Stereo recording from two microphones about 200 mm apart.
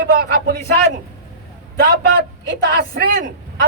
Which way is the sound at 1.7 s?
50° right (ahead or behind).